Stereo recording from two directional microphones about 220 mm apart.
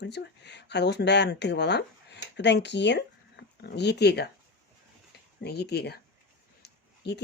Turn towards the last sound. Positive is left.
turn(degrees=50)  # may be behind; listen again after turning